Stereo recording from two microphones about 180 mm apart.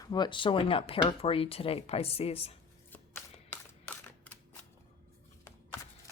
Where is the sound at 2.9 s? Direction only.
10° left (ahead or behind).